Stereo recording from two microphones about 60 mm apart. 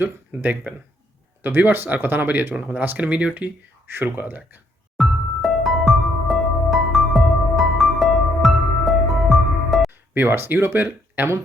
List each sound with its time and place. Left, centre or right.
0.0 s speech: right
4.9 s music: centre
10.2 s speech: right